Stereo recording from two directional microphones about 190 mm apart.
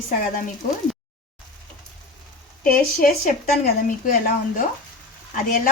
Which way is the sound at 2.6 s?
50° left (ahead or behind).